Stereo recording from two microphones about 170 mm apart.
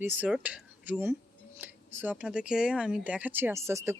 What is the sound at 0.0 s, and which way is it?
Speech, 10° right (ahead or behind).